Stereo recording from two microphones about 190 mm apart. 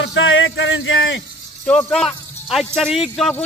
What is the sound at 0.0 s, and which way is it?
Speech, 90° left.